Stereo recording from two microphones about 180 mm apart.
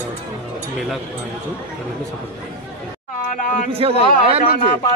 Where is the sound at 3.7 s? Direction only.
30° right (ahead or behind).